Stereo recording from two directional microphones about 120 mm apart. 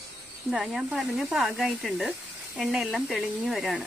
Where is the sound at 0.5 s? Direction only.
5° right (ahead or behind).